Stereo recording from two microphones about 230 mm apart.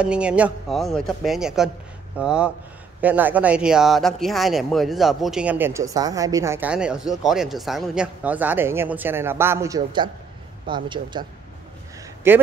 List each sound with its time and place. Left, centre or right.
0.0 s speech: centre
12.2 s speech: centre